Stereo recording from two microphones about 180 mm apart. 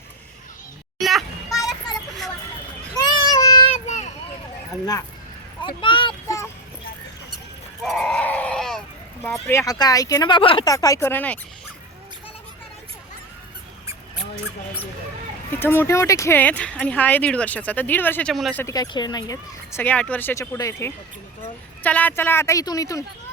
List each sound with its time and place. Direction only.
0.9 s children playing: centre (ahead or behind)
2.9 s child singing: 20° left (ahead or behind)
3.8 s a sound: 40° left (ahead or behind)
5.6 s speech: 25° left (ahead or behind)
7.9 s goat: 5° left (ahead or behind)
9.5 s speech: 20° left (ahead or behind)
15.5 s speech: 10° left (ahead or behind)
18.6 s speech: 20° left (ahead or behind)